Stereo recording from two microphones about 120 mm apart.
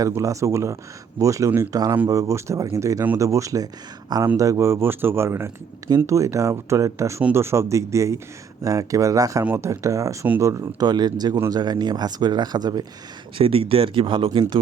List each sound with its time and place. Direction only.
0.1 s speech: 25° right (ahead or behind)
9.4 s speech: 15° right (ahead or behind)
9.6 s speech: 25° right (ahead or behind)
13.4 s speech: 50° right (ahead or behind)